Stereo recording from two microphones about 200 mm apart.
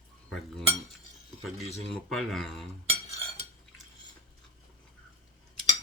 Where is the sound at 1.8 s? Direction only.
Centre (ahead or behind).